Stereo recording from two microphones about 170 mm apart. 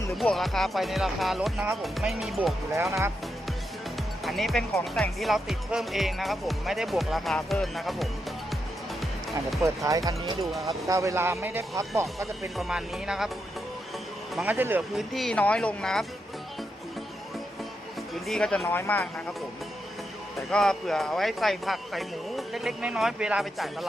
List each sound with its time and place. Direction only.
0.2 s speech: centre (ahead or behind)
4.2 s speech: centre (ahead or behind)
9.6 s speech: 20° right (ahead or behind)
10.4 s speech: centre (ahead or behind)
10.7 s speech: 20° right (ahead or behind)
12.2 s speech: centre (ahead or behind)
14.3 s speech: 10° right (ahead or behind)
18.1 s speech: centre (ahead or behind)
20.5 s speech: 5° left (ahead or behind)